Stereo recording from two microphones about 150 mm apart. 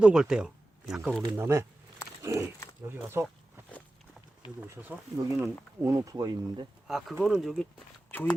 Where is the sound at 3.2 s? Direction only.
10° left (ahead or behind).